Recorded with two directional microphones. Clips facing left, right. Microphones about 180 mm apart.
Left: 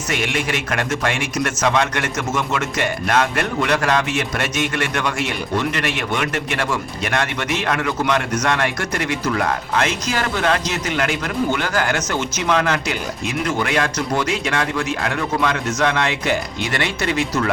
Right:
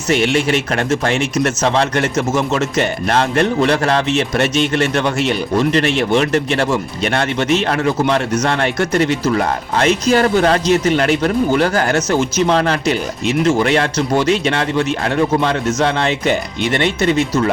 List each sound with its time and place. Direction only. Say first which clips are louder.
0.1 s a man's voice: right 8 dB; 30° right (ahead or behind)